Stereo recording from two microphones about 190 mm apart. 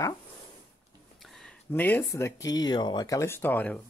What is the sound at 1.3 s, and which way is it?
Speech, 5° left (ahead or behind).